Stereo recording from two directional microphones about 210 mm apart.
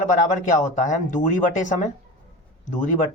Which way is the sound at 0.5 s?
40° left (ahead or behind).